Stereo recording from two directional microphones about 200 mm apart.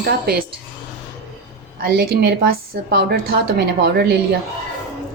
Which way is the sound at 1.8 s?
55° right (ahead or behind).